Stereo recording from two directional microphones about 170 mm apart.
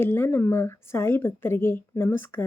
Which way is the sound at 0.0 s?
15° left (ahead or behind).